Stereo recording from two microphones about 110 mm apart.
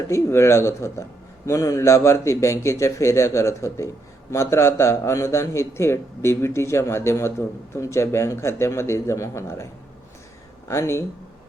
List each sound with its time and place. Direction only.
0.1 s a man's voice: 25° left (ahead or behind)
10.7 s a man's voice: 25° left (ahead or behind)